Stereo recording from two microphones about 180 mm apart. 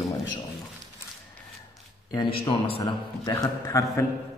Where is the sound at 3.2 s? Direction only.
15° left (ahead or behind).